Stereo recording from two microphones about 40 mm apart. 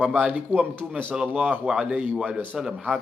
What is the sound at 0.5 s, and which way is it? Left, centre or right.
Speech, right.